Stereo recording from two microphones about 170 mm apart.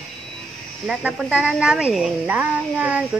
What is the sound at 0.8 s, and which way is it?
Speech, 5° right (ahead or behind).